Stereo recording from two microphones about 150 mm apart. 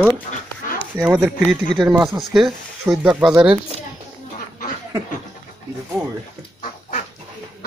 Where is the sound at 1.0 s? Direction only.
10° right (ahead or behind).